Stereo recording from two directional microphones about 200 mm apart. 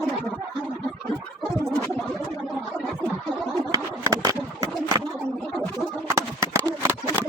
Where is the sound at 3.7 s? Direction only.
20° right (ahead or behind).